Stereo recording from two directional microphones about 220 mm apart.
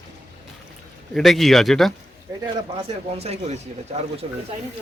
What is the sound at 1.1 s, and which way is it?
Speech, centre (ahead or behind).